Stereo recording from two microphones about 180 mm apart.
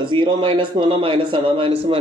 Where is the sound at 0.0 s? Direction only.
25° right (ahead or behind).